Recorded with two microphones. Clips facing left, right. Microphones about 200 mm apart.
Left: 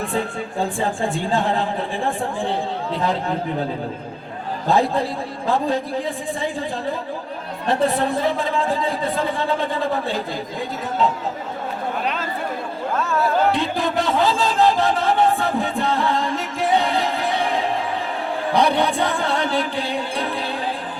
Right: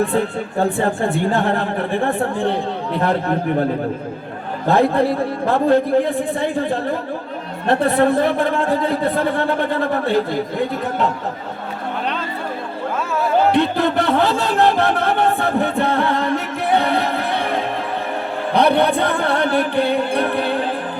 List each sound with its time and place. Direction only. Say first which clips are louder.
0.6 s a man's voice: right 4 dB; 60° right (ahead or behind)
4.6 s a man's voice: right 4 dB; 60° right (ahead or behind)
13.0 s music: left 1 dB; 10° right (ahead or behind)
13.5 s music: right 5 dB; 60° right (ahead or behind)